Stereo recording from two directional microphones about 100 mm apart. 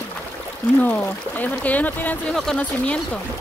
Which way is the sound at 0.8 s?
15° left (ahead or behind).